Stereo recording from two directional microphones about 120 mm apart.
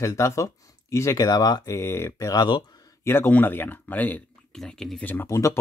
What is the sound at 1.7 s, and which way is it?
Speech, 20° left (ahead or behind).